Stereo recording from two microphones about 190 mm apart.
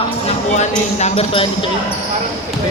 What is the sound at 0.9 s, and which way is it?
Speech, 35° left (ahead or behind).